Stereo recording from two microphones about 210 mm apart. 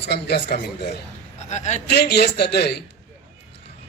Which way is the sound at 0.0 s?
50° left (ahead or behind).